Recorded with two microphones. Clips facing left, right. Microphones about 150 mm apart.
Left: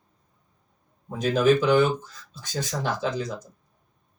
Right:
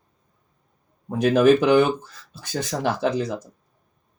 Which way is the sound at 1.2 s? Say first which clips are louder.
Right 4 dB; 60° right (ahead or behind).